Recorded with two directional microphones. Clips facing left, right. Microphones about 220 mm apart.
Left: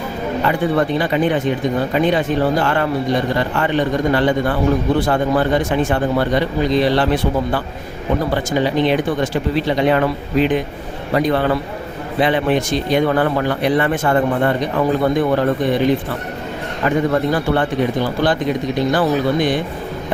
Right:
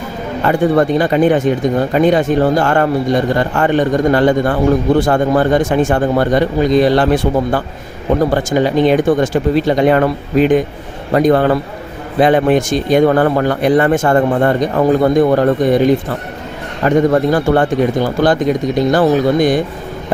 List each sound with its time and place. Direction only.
0.4 s a man's voice: 45° right (ahead or behind)